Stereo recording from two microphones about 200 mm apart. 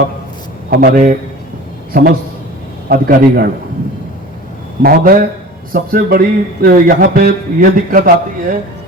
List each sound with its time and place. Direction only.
0.7 s a man's voice: 50° right (ahead or behind)
4.8 s a man's voice: 50° right (ahead or behind)